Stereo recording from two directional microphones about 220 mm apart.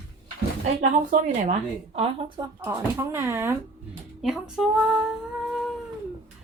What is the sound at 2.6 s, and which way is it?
Speech, 10° right (ahead or behind).